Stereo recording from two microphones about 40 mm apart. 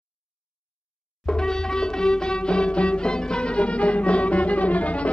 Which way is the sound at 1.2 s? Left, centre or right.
Centre.